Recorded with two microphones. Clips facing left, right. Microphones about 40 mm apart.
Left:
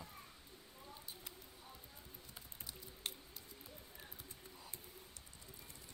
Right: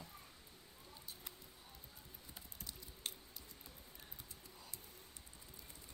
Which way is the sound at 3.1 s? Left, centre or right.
Centre.